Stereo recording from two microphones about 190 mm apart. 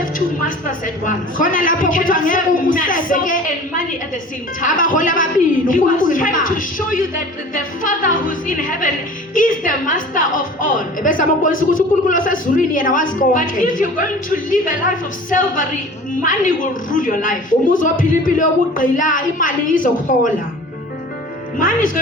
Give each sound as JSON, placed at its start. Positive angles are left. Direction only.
{"t": 1.0, "sound": "a man's voice", "side_deg": 45}
{"t": 21.6, "sound": "a man's voice", "side_deg": 45}